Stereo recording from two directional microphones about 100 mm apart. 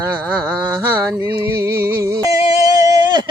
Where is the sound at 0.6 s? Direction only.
20° right (ahead or behind).